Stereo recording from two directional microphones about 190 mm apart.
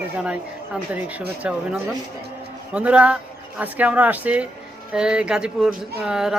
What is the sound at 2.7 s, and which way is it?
Speech, 5° right (ahead or behind).